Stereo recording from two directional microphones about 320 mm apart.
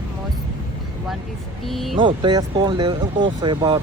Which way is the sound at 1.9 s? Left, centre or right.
Centre.